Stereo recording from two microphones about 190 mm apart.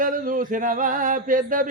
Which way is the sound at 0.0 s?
45° right (ahead or behind).